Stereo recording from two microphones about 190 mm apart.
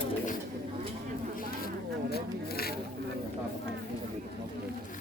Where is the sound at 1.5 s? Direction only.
55° left (ahead or behind).